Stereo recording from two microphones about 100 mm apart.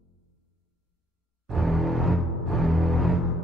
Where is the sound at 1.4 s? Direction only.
Centre (ahead or behind).